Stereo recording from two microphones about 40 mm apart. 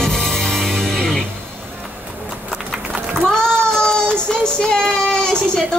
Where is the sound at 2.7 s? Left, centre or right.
Centre.